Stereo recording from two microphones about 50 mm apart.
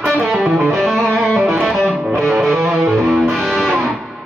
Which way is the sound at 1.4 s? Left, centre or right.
Centre.